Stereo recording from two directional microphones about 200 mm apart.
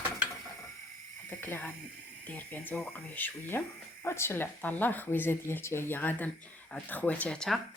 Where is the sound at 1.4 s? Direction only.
10° left (ahead or behind).